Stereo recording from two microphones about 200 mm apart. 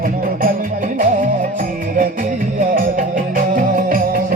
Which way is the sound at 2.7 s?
45° right (ahead or behind).